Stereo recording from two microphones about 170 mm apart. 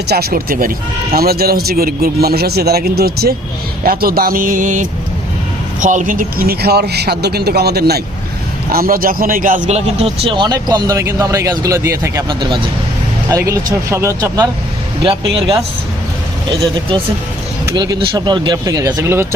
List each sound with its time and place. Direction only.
0.1 s a man's voice: 65° right (ahead or behind)
8.7 s a man's voice: 60° right (ahead or behind); by 12.6 s 30° right (ahead or behind)
13.3 s speech: 20° right (ahead or behind)
15.0 s speech: 30° right (ahead or behind)
17.7 s a man's voice: 20° right (ahead or behind)